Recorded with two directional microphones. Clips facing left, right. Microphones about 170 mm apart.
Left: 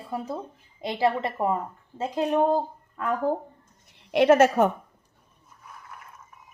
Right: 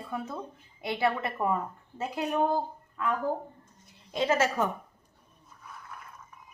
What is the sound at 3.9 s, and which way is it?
Speech, 70° left (ahead or behind).